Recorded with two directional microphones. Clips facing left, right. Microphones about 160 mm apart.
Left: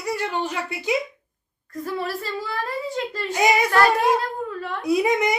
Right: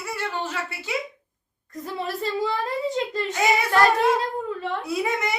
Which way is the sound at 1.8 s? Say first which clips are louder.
Left 1 dB; 20° right (ahead or behind).